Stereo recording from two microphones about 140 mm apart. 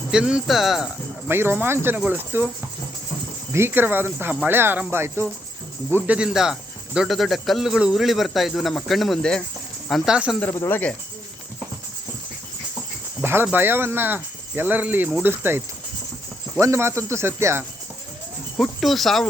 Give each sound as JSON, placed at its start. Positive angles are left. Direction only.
{"t": 0.1, "sound": "speech", "side_deg": -5}
{"t": 1.3, "sound": "speech", "side_deg": -15}
{"t": 3.5, "sound": "speech", "side_deg": -15}
{"t": 10.4, "sound": "speech", "side_deg": 15}
{"t": 13.2, "sound": "speech", "side_deg": -15}
{"t": 18.5, "sound": "speech", "side_deg": 0}